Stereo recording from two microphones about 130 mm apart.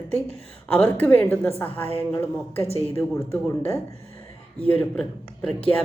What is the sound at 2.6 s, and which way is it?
Speech, 50° left (ahead or behind).